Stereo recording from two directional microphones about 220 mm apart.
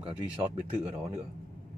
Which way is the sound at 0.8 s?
25° right (ahead or behind).